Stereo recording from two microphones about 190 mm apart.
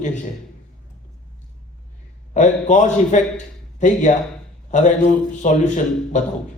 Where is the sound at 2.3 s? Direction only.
40° left (ahead or behind).